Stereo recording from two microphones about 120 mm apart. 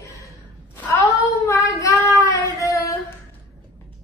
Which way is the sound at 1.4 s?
25° left (ahead or behind).